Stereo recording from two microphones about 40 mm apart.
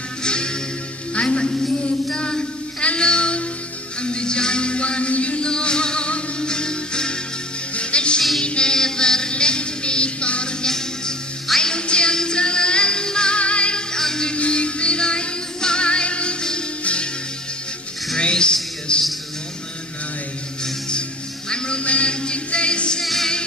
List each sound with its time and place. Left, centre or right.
0.2 s music: left
1.1 s a man's voice: left
2.1 s music: left
10.6 s music: centre
13.9 s music: centre
14.3 s music: left
18.1 s music: left
21.5 s music: left
23.0 s music: centre